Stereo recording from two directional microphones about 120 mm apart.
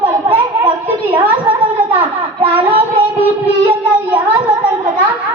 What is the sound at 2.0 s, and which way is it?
Child singing, 50° right (ahead or behind).